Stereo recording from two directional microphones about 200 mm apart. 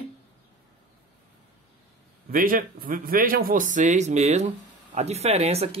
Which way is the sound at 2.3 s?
45° right (ahead or behind).